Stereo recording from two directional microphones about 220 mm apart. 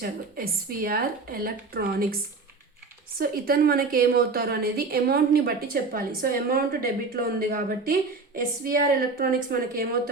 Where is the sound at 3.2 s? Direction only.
40° right (ahead or behind).